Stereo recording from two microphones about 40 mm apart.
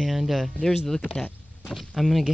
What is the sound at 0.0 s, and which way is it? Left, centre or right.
Speech, centre.